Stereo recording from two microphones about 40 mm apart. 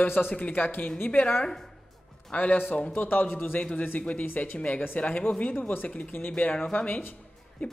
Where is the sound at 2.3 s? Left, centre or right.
Left.